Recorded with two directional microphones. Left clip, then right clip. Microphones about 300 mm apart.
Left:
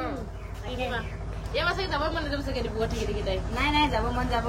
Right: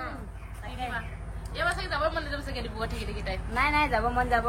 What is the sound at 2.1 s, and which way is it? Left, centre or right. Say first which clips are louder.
Speech: left 2 dB; centre.